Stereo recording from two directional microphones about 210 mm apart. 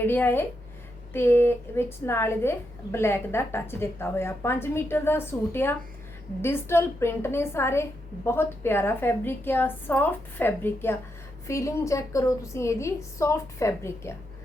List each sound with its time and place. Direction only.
0.0 s a woman's voice: 10° left (ahead or behind)